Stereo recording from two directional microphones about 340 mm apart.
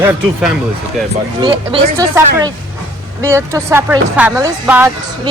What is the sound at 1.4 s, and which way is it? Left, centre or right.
Speech, centre.